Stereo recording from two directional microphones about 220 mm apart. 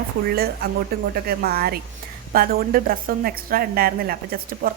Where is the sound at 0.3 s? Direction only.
45° right (ahead or behind).